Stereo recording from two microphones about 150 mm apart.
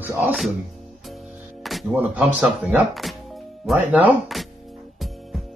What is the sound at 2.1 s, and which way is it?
A man's voice, 10° right (ahead or behind).